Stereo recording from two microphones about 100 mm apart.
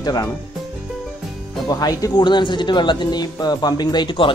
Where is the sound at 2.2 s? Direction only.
50° left (ahead or behind).